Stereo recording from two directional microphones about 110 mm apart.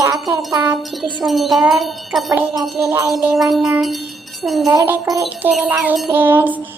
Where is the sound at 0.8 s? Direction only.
Centre (ahead or behind).